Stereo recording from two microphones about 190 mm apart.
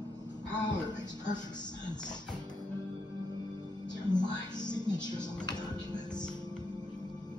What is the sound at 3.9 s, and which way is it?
Music, 20° left (ahead or behind).